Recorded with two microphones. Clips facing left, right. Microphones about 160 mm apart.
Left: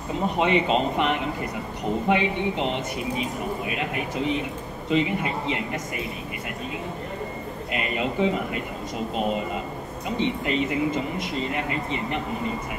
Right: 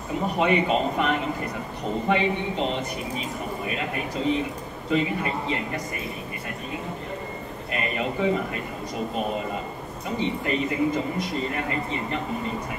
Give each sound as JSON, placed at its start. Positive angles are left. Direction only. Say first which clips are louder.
{"t": 0.4, "sound": "a woman's voice", "louder": "even", "side_deg": 20}
{"t": 8.2, "sound": "speech", "louder": "even", "side_deg": 20}
{"t": 10.0, "sound": "speech", "louder": "left 1 dB", "side_deg": 20}